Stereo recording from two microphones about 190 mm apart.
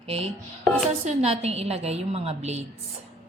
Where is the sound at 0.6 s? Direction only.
10° left (ahead or behind).